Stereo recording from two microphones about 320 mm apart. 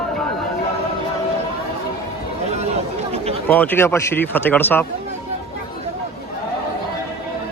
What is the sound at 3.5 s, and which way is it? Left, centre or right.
Speech, centre.